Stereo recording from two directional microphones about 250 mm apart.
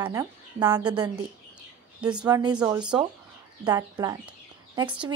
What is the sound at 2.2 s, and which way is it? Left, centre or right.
Speech, centre.